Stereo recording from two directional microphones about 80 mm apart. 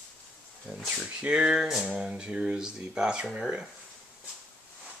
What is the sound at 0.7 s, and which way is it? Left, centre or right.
Speech, centre.